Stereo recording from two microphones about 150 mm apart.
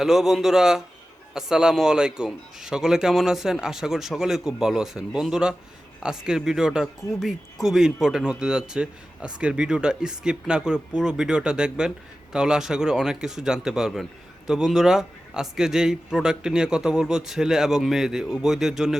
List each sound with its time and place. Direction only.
0.0 s speech: centre (ahead or behind)